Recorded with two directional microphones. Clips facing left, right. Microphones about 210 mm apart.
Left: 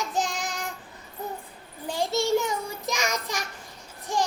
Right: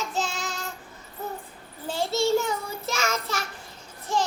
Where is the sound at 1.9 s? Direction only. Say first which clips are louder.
Right 1 dB; 15° left (ahead or behind).